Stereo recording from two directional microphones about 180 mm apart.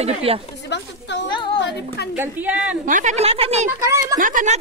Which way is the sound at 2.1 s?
10° right (ahead or behind).